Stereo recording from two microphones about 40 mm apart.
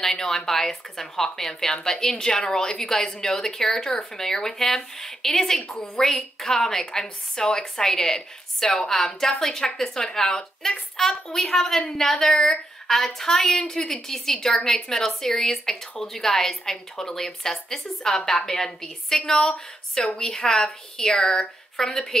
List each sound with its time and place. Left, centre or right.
0.0 s a woman's voice: centre